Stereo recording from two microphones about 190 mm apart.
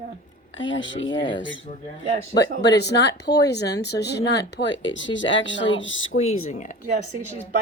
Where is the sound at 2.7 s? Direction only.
65° left (ahead or behind); by 6.1 s 80° left.